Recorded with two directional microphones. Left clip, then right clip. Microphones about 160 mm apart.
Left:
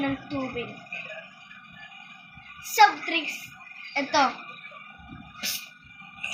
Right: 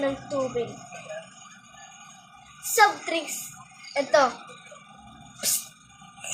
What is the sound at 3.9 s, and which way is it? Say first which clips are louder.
Speech: right 2 dB; 30° right (ahead or behind).